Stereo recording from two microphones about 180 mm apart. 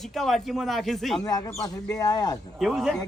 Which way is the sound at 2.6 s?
Centre (ahead or behind).